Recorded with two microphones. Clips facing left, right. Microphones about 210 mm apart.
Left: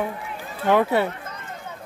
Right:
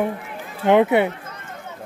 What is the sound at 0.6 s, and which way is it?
Speech, 20° right (ahead or behind).